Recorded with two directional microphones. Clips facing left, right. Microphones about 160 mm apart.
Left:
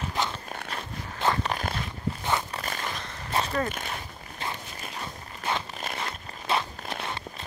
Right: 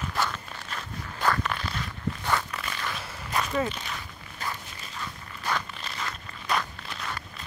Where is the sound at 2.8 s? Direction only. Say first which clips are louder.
Even; 30° left (ahead or behind).